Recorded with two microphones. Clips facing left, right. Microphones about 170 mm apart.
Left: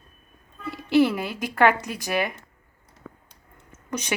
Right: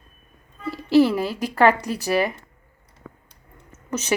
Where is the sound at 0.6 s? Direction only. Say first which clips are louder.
Right 3 dB; 30° right (ahead or behind).